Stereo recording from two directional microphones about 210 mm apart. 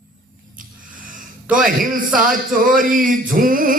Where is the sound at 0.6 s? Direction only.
40° right (ahead or behind).